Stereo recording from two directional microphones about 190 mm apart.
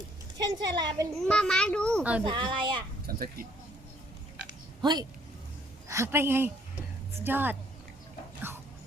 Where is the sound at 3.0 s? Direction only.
50° right (ahead or behind).